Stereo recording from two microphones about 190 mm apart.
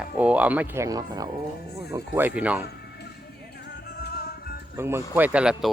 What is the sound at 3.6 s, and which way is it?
Music, 55° left (ahead or behind).